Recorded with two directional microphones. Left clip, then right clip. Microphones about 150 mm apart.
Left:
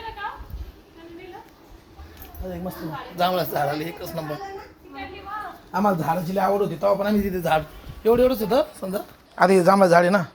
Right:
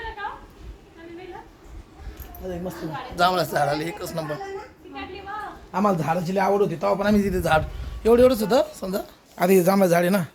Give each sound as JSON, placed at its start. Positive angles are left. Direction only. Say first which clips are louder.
{"t": 3.2, "sound": "a man's voice", "louder": "right 2 dB", "side_deg": -5}
{"t": 5.7, "sound": "a man's voice", "louder": "even", "side_deg": -10}
{"t": 9.4, "sound": "a man's voice", "louder": "left 2 dB", "side_deg": -45}
{"t": 9.7, "sound": "speech", "louder": "left 4 dB", "side_deg": -35}